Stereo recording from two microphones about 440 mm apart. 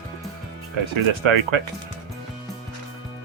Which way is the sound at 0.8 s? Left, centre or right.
Right.